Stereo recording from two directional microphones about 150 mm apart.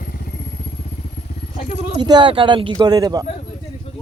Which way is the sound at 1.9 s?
30° right (ahead or behind).